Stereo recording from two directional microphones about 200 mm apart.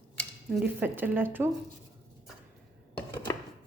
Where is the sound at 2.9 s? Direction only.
15° left (ahead or behind).